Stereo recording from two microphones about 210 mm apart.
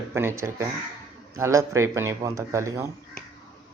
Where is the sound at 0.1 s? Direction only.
10° right (ahead or behind).